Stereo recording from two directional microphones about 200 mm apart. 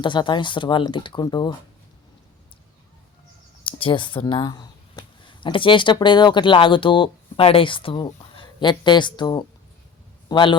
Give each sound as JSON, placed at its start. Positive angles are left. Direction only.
{"t": 0.0, "sound": "speech", "side_deg": 25}
{"t": 3.6, "sound": "speech", "side_deg": 25}